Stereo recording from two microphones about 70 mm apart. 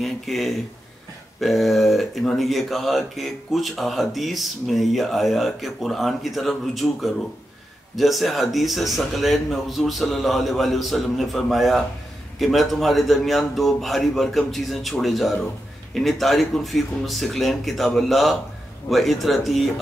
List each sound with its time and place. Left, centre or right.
0.0 s speech: centre